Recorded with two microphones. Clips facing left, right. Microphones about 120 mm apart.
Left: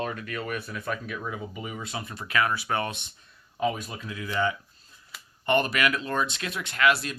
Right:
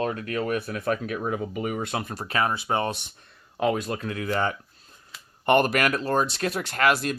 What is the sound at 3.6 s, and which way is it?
Speech, 75° right (ahead or behind).